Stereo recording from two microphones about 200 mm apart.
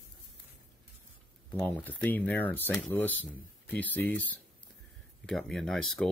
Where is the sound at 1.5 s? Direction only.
10° left (ahead or behind).